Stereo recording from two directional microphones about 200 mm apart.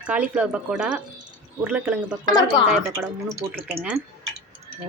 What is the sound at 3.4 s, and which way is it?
Speech, 20° right (ahead or behind).